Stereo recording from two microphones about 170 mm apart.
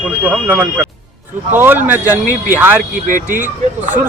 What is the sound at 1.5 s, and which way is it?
Speech, 10° right (ahead or behind).